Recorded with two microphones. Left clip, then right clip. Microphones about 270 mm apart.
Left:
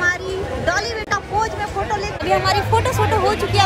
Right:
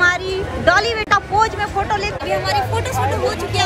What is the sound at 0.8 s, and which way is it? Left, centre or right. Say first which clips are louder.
Speech: right 6 dB; centre.